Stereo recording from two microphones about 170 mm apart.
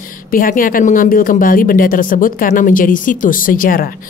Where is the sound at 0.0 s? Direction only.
55° left (ahead or behind).